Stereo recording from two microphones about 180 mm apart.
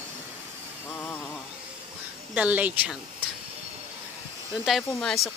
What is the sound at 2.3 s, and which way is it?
Speech, 10° right (ahead or behind).